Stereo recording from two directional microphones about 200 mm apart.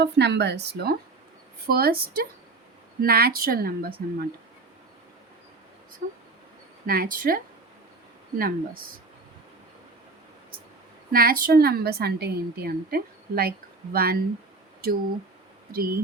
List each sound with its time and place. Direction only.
0.0 s a woman's voice: 60° right (ahead or behind)
6.0 s a woman's voice: 45° right (ahead or behind)
8.4 s a woman's voice: 45° right (ahead or behind)
11.1 s a woman's voice: 50° right (ahead or behind)
15.7 s a woman's voice: 50° right (ahead or behind)